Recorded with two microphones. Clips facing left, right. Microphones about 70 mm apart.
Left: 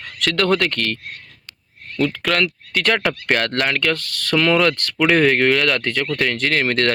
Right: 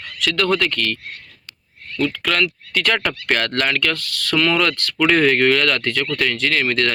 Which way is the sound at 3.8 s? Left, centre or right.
Left.